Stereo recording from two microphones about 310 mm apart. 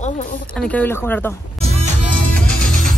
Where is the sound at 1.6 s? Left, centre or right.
Right.